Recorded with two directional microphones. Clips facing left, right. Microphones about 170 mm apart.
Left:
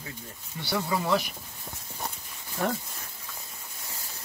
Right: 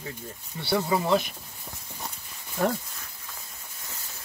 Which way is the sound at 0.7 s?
25° right (ahead or behind).